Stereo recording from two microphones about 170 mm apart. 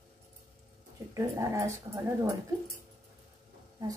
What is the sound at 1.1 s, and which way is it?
A woman's voice, 20° right (ahead or behind).